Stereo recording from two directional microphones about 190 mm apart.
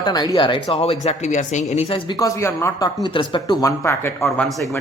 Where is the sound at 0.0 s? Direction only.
20° left (ahead or behind).